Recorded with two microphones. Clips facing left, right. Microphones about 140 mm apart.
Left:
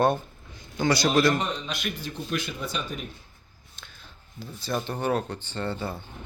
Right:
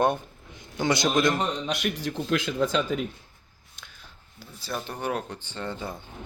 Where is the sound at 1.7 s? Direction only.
75° right (ahead or behind).